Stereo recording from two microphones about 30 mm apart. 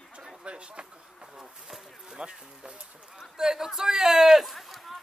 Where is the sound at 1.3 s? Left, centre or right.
Centre.